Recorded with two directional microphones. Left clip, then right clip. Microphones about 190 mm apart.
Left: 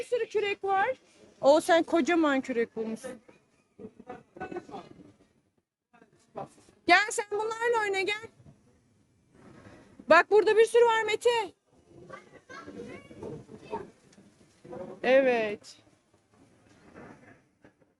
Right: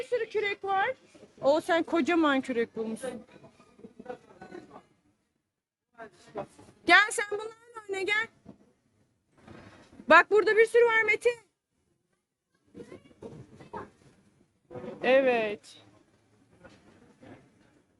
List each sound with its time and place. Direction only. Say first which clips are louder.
0.1 s speech: left 1 dB; 20° left (ahead or behind); by 3.0 s centre (ahead or behind)
6.8 s speech: right 2 dB; centre (ahead or behind)
10.1 s speech: right 1 dB; centre (ahead or behind)
10.3 s speech: left 1 dB; 10° left (ahead or behind)
15.0 s speech: even; 10° left (ahead or behind)